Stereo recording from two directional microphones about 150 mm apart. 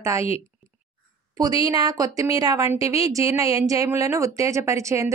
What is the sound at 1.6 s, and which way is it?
A woman's voice, 25° right (ahead or behind).